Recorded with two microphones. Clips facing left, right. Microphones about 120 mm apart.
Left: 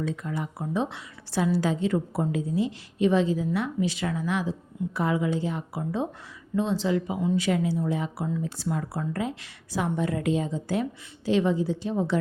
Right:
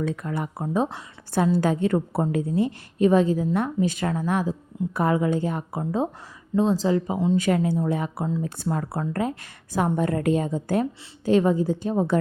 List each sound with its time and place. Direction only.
0.0 s a woman's voice: 55° right (ahead or behind)
5.8 s speech: 35° right (ahead or behind)
7.3 s a woman's voice: 50° right (ahead or behind)